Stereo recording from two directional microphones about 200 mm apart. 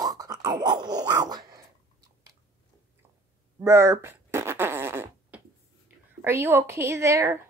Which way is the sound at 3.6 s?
15° right (ahead or behind).